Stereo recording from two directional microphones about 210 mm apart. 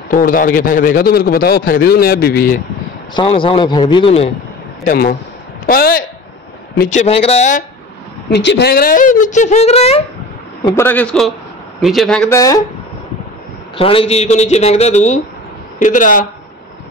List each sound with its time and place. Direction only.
0.1 s a man's voice: 40° left (ahead or behind)
3.2 s speech: 25° left (ahead or behind)
4.8 s a man's voice: 45° left (ahead or behind)
6.8 s speech: 35° left (ahead or behind)
8.3 s speech: 55° left (ahead or behind); by 10.0 s 30° left (ahead or behind)
10.6 s a man's voice: 15° left (ahead or behind)
12.4 s a man's voice: 15° left (ahead or behind)
13.7 s speech: 25° left (ahead or behind)